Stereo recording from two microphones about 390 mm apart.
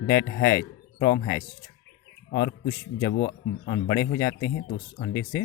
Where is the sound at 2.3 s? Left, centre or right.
Left.